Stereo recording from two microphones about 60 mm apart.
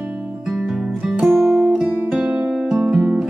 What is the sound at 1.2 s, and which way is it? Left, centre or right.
Music, centre.